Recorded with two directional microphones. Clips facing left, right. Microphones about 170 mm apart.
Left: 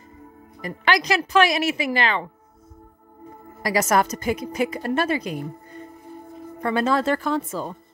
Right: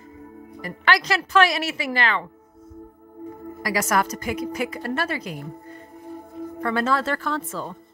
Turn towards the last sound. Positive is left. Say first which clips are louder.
# left 3 dB
turn(degrees=15)  # may be behind; listen again after turning